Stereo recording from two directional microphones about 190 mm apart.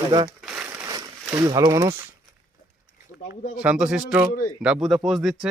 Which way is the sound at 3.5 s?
5° right (ahead or behind).